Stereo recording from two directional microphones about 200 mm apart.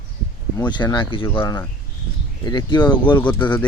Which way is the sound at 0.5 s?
20° left (ahead or behind).